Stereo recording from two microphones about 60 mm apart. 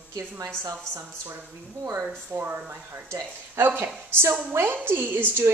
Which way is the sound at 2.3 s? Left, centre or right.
Right.